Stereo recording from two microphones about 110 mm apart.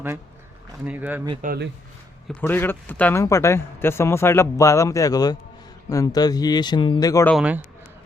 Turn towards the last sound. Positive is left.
turn(degrees=-15)  # may be behind; listen again after turning